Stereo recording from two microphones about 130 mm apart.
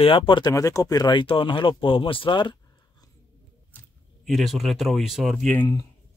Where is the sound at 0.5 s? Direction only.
25° left (ahead or behind).